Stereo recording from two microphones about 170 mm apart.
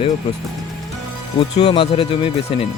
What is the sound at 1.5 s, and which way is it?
Speech, 35° left (ahead or behind).